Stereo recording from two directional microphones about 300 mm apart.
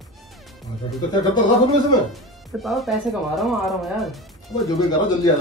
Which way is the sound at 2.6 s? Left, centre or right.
Centre.